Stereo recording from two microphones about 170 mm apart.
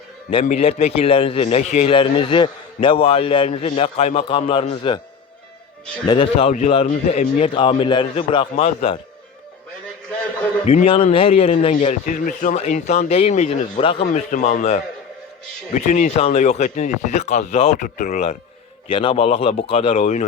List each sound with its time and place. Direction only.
0.4 s a man's voice: 40° left (ahead or behind)
6.1 s a man's voice: 35° left (ahead or behind)
6.8 s a man's voice: 45° left (ahead or behind)
7.5 s a man's voice: 30° left (ahead or behind)
10.7 s a man's voice: 35° left (ahead or behind)
13.8 s a man's voice: 30° left (ahead or behind)
14.1 s a man's voice: 45° left (ahead or behind)
17.8 s speech: 50° left (ahead or behind)
18.9 s a man's voice: 30° left (ahead or behind)